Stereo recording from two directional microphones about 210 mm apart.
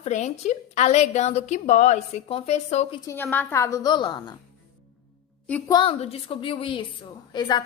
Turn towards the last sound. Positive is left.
turn(degrees=20)  # may be behind; listen again after turning